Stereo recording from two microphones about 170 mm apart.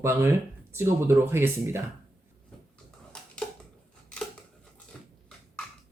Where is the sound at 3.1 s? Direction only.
5° left (ahead or behind).